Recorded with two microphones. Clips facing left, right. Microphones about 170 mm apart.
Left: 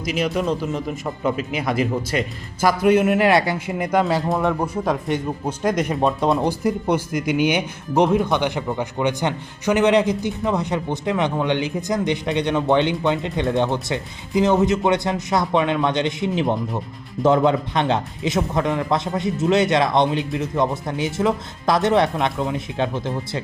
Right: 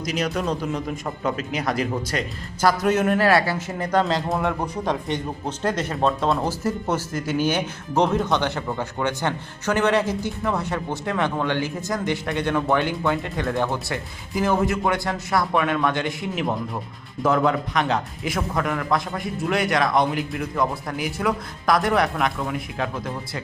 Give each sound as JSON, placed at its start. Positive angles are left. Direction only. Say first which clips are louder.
{"t": 0.0, "sound": "speech", "louder": "left 3 dB", "side_deg": 5}
{"t": 4.0, "sound": "a man's voice", "louder": "left 3 dB", "side_deg": 0}